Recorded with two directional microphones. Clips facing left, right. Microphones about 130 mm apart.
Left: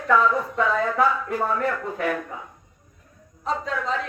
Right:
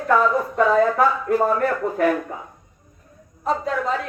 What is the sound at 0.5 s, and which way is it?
Speech, 45° right (ahead or behind).